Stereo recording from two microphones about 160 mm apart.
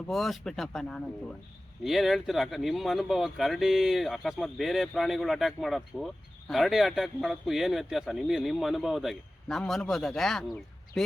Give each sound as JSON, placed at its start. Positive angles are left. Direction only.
{"t": 0.1, "sound": "speech", "side_deg": 0}